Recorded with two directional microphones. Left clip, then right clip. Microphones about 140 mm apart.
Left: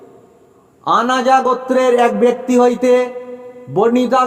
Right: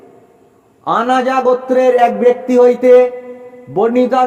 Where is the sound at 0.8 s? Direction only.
15° left (ahead or behind).